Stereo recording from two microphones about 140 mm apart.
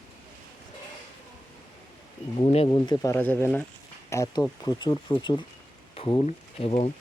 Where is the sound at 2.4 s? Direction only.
45° left (ahead or behind).